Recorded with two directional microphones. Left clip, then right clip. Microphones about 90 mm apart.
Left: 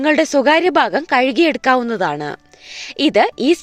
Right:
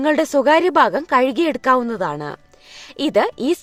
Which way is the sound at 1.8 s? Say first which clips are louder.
Left 4 dB; 30° left (ahead or behind).